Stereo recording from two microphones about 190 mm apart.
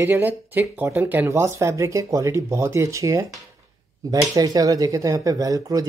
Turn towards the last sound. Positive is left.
turn(degrees=-20)  # may be behind; listen again after turning